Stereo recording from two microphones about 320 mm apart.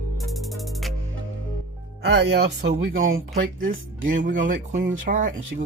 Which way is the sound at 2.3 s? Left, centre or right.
Right.